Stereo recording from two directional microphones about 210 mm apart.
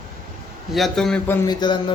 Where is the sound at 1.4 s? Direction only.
20° left (ahead or behind).